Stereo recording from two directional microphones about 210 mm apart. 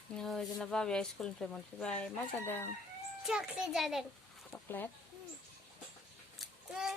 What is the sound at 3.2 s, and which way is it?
Speech, centre (ahead or behind).